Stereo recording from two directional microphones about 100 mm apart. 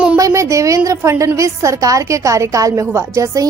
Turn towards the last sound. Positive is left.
turn(degrees=-30)  # may be behind; listen again after turning